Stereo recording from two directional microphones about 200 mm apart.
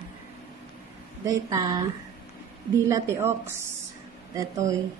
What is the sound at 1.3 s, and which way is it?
Speech, 15° right (ahead or behind).